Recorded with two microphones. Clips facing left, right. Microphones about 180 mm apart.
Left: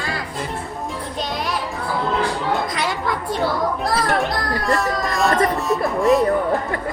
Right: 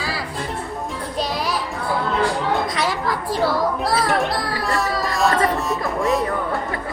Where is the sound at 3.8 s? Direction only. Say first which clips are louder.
Even; centre (ahead or behind).